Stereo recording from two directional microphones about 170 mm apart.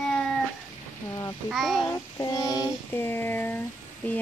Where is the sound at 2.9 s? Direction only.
10° left (ahead or behind).